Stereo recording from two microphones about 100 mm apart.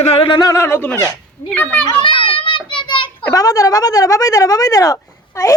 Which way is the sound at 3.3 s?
35° left (ahead or behind).